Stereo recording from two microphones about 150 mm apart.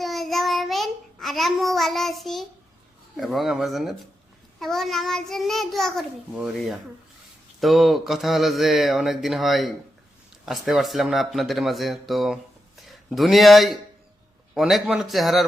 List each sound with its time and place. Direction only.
0.0 s child singing: centre (ahead or behind)
3.2 s a child's voice: centre (ahead or behind)